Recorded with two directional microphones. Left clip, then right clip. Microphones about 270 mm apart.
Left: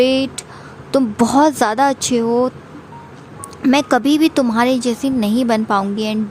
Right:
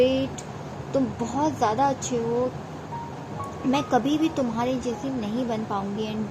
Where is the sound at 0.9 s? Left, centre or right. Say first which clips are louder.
Left 12 dB; left.